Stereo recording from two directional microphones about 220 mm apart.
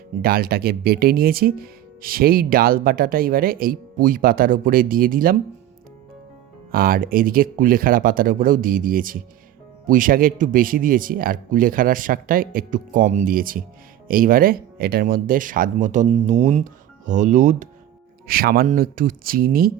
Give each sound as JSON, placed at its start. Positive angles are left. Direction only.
{"t": 0.2, "sound": "speech", "side_deg": -45}
{"t": 6.7, "sound": "speech", "side_deg": -40}